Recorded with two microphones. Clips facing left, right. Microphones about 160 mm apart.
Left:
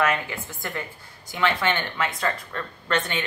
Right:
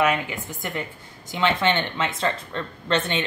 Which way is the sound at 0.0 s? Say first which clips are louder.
Right 2 dB; 15° right (ahead or behind).